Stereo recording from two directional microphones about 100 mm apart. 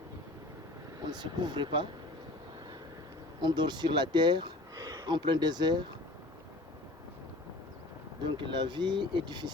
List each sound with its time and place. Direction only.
1.1 s speech: 50° right (ahead or behind)
3.4 s speech: 45° right (ahead or behind)
8.2 s speech: 55° right (ahead or behind)